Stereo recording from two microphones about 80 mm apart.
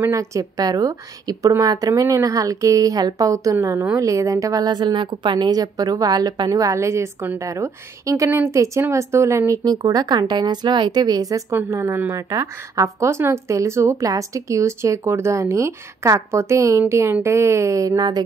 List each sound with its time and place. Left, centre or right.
0.1 s speech: right
4.6 s speech: right
6.5 s speech: right
9.5 s speech: right
11.7 s speech: right